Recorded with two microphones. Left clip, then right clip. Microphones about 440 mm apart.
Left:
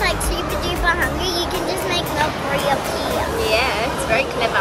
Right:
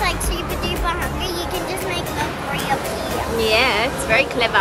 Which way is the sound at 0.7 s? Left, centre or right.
Centre.